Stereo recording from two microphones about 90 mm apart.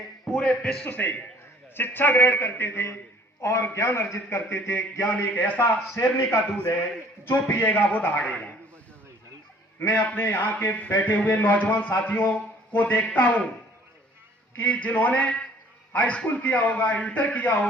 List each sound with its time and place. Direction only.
0.3 s a man's voice: 5° left (ahead or behind)
0.9 s a man's voice: 20° left (ahead or behind)
6.0 s a man's voice: 35° left (ahead or behind); by 8.4 s 15° left (ahead or behind)
9.9 s a man's voice: 20° left (ahead or behind)
14.5 s a man's voice: 15° left (ahead or behind)